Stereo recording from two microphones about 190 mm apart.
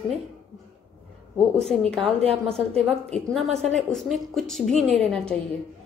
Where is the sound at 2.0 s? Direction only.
30° right (ahead or behind).